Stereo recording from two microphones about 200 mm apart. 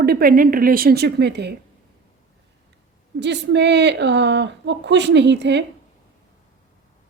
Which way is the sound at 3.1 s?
60° right (ahead or behind).